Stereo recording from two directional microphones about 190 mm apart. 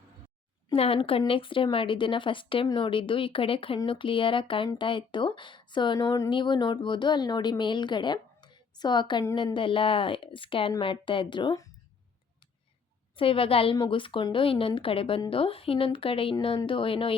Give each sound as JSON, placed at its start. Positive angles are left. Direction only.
{"t": 0.7, "sound": "a woman's voice", "side_deg": 30}
{"t": 13.1, "sound": "a woman's voice", "side_deg": 30}